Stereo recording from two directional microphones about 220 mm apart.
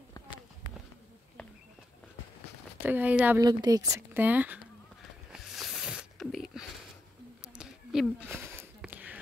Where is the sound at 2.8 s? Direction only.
5° right (ahead or behind).